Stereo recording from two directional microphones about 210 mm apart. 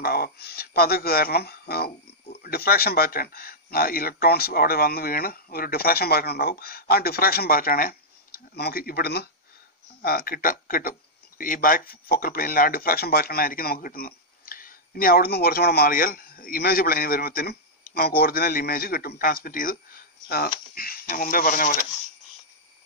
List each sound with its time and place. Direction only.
0.0 s speech: 50° left (ahead or behind)